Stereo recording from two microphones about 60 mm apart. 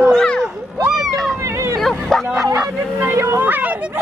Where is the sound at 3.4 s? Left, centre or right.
Right.